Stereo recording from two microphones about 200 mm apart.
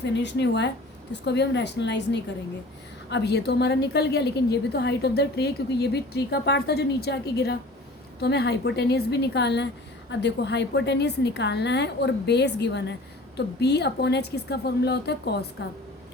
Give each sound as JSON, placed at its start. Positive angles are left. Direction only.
{"t": 0.0, "sound": "a woman's voice", "side_deg": 60}